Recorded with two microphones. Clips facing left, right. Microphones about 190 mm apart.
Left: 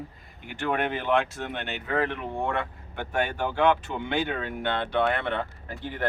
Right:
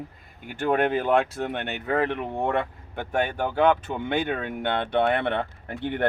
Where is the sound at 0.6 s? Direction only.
40° right (ahead or behind).